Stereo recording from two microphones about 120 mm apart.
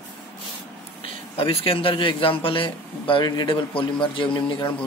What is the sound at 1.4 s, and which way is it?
A man's voice, 50° left (ahead or behind).